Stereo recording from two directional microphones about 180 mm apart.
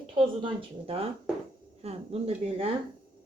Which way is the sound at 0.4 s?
30° right (ahead or behind).